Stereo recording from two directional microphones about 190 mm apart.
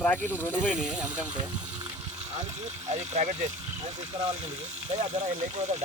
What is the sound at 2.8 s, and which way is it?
Speech, 35° right (ahead or behind).